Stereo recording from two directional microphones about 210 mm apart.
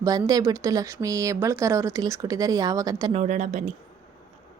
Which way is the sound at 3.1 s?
35° right (ahead or behind).